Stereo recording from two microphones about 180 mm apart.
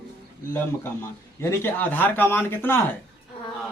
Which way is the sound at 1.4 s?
10° left (ahead or behind).